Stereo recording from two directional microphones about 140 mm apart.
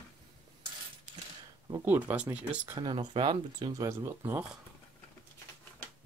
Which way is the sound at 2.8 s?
35° right (ahead or behind).